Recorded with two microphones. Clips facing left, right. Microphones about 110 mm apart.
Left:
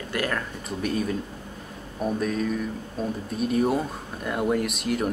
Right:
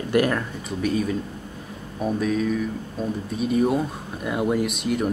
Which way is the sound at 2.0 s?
Centre (ahead or behind).